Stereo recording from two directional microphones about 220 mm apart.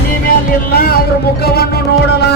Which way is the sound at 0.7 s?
45° left (ahead or behind).